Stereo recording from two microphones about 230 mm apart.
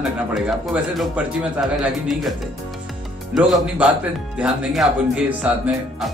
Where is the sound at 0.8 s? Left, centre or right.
Centre.